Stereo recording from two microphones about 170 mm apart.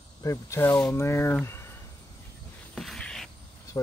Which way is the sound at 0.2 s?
15° left (ahead or behind).